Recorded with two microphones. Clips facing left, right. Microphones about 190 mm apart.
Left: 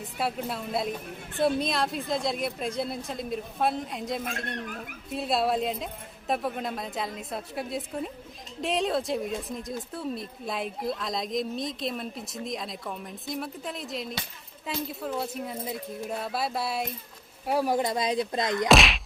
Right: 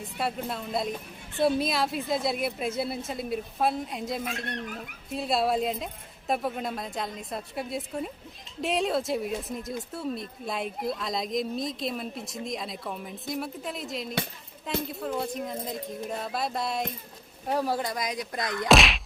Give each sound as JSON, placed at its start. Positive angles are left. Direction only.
{"t": 0.0, "sound": "a woman's voice", "side_deg": 0}
{"t": 18.7, "sound": "a woman's voice", "side_deg": 0}